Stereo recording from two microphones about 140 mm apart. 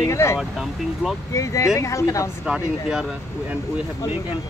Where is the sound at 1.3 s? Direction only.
20° left (ahead or behind).